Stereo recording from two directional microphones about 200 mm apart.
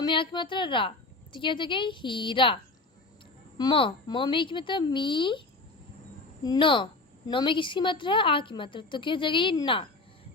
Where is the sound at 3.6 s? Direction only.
25° left (ahead or behind).